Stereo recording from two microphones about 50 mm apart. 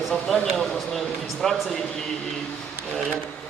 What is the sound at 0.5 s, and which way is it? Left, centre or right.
A man's voice, centre.